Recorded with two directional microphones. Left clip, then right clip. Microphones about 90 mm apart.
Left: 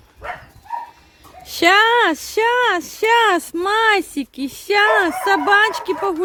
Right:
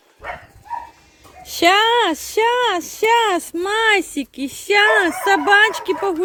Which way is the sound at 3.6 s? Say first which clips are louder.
Left 1 dB; 25° left (ahead or behind).